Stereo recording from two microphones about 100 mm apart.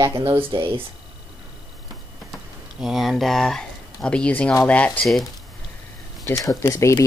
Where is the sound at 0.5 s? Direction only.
55° right (ahead or behind).